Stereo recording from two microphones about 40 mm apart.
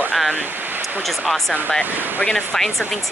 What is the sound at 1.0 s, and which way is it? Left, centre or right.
Speech, centre.